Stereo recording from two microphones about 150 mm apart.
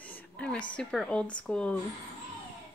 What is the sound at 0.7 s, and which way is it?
Speech, 5° left (ahead or behind).